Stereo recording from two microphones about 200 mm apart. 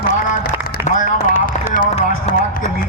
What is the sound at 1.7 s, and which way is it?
Music, 40° left (ahead or behind).